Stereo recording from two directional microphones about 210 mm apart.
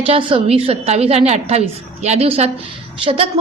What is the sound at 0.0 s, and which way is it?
A woman's voice, 25° right (ahead or behind).